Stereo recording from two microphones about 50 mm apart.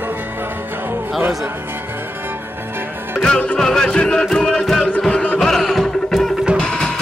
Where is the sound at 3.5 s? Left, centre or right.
Centre.